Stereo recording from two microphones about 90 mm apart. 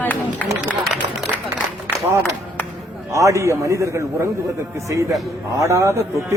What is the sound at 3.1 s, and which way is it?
A man's voice, 35° right (ahead or behind).